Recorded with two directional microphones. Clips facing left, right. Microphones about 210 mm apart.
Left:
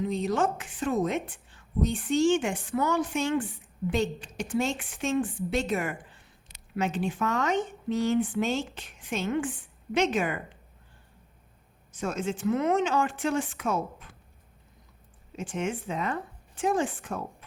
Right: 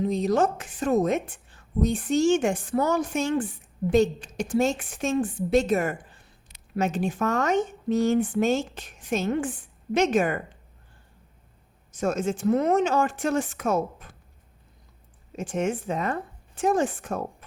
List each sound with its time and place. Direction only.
0.0 s a woman's voice: 40° right (ahead or behind)
11.9 s a woman's voice: 45° right (ahead or behind)
15.4 s a woman's voice: 45° right (ahead or behind)